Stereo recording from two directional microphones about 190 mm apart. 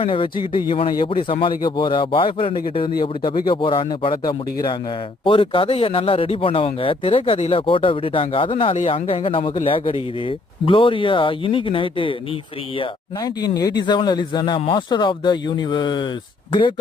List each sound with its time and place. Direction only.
0.0 s speech: 25° left (ahead or behind)